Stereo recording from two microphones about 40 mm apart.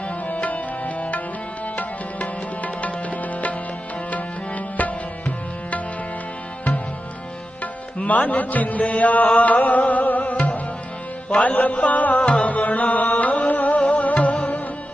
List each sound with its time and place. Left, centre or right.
0.3 s music: left
7.6 s music: left
12.2 s music: left
12.5 s music: left